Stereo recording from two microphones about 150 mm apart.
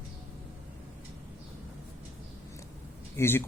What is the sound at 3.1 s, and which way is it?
Speech, 15° left (ahead or behind).